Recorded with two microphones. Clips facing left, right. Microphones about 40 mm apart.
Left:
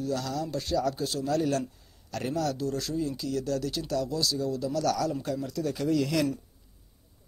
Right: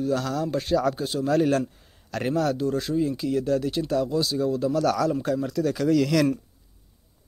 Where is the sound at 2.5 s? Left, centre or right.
Right.